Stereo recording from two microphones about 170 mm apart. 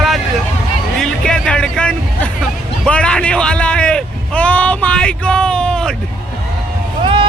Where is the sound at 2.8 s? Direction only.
5° left (ahead or behind).